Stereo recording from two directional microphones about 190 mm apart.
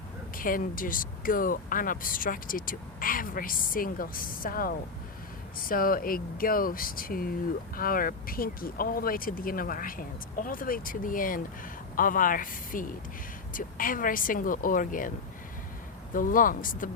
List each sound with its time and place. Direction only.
0.3 s speech: 45° left (ahead or behind)
16.1 s speech: 45° left (ahead or behind)